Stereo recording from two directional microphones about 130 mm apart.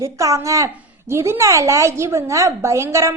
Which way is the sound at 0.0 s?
25° right (ahead or behind).